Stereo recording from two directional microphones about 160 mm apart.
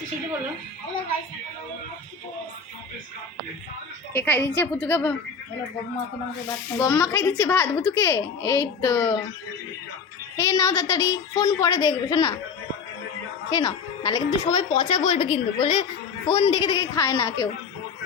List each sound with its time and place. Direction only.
4.1 s a child's voice: 10° left (ahead or behind)
6.7 s a child's voice: 15° left (ahead or behind)
10.3 s speech: 20° left (ahead or behind)
13.5 s speech: 25° left (ahead or behind)